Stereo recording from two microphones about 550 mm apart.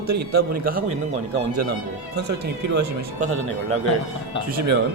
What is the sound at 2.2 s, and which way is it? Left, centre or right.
Speech, centre.